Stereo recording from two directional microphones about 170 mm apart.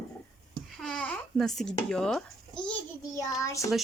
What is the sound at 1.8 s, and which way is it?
Speech, 5° left (ahead or behind).